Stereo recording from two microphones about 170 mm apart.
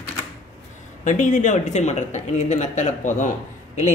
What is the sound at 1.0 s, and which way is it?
Speech, 50° left (ahead or behind).